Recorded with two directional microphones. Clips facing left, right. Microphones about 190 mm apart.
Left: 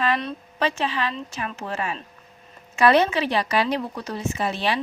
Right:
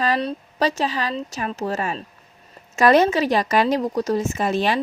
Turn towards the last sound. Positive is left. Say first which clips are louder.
# right 4 dB
turn(degrees=-45)  # may be behind; listen again after turning